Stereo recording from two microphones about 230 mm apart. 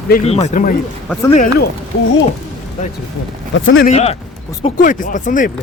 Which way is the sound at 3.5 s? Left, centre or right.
Left.